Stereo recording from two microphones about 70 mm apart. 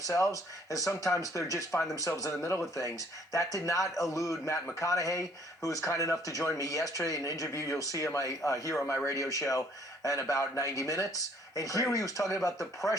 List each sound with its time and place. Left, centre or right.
0.1 s speech: left